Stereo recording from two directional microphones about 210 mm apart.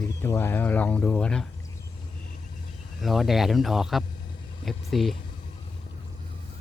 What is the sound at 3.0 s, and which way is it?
Speech, centre (ahead or behind).